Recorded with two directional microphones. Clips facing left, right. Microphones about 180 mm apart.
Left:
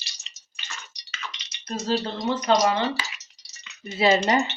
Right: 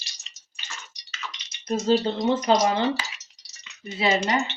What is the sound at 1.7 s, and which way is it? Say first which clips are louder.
Speech: right 5 dB; 20° right (ahead or behind).